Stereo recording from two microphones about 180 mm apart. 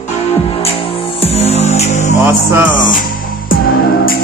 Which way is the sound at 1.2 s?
35° left (ahead or behind).